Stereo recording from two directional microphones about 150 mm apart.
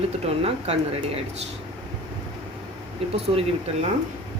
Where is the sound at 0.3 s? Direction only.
45° right (ahead or behind).